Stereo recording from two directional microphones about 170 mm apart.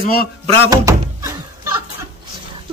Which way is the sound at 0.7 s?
20° right (ahead or behind).